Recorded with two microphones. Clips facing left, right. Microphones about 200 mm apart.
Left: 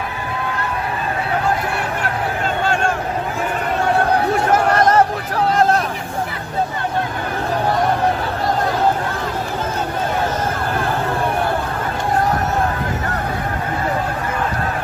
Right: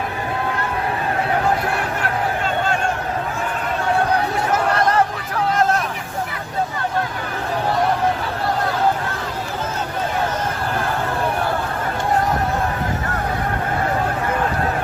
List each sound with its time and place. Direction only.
4.7 s chatter: 45° left (ahead or behind)